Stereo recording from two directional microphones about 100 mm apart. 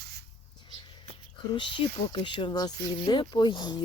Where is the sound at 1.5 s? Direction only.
55° left (ahead or behind).